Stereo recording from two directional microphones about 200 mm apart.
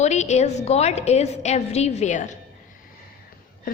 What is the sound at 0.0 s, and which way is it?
A woman's voice, 35° left (ahead or behind).